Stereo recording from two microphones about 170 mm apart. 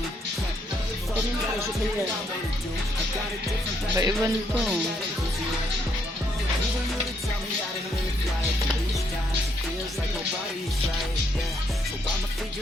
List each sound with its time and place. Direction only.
3.9 s speech: 15° right (ahead or behind)